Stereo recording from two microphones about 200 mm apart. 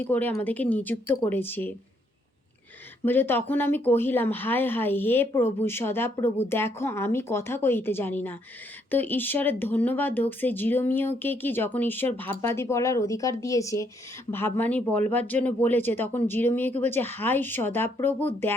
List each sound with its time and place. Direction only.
0.0 s speech: 10° left (ahead or behind)
3.0 s speech: 10° left (ahead or behind)